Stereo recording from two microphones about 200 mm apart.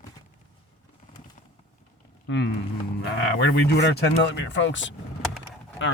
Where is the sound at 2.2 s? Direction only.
60° left (ahead or behind).